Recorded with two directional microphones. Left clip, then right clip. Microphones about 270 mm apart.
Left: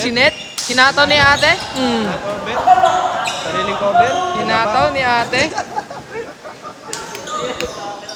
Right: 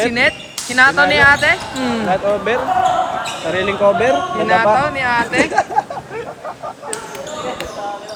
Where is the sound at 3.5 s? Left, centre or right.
Right.